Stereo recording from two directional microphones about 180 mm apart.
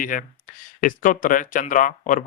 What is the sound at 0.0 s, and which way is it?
Speech, 50° left (ahead or behind).